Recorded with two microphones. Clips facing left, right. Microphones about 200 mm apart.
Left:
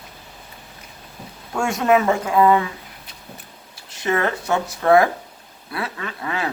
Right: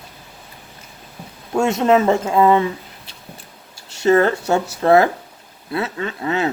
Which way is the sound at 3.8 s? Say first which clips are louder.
Right 7 dB; 30° right (ahead or behind).